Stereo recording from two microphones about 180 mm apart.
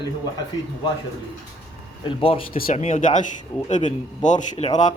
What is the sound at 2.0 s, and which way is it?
A man's voice, 30° left (ahead or behind).